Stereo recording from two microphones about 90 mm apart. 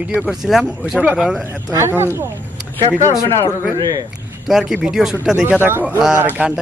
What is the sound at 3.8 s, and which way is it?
Speech, 45° right (ahead or behind).